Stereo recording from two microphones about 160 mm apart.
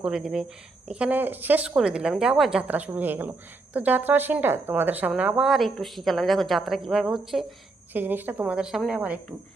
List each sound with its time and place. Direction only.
0.0 s a woman's voice: 5° right (ahead or behind)
7.9 s speech: 10° right (ahead or behind)